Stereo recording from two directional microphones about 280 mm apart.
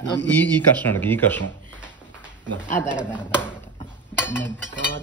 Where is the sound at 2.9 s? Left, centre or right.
Centre.